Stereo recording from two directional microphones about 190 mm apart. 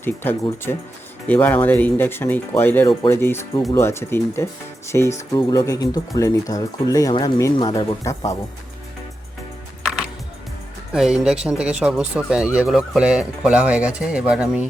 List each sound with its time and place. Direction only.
0.0 s speech: 10° left (ahead or behind)
10.9 s speech: 5° right (ahead or behind)